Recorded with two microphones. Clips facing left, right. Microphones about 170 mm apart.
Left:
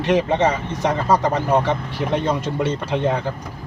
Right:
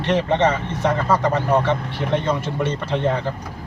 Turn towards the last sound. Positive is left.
turn(degrees=15)  # may be behind; listen again after turning